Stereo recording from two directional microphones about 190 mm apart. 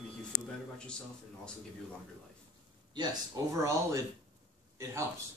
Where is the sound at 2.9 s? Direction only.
20° right (ahead or behind).